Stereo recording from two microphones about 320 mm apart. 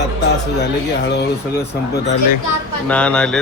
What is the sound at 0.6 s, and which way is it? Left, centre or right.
Speech, left.